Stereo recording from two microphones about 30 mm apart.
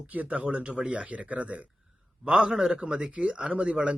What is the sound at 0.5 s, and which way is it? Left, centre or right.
Speech, right.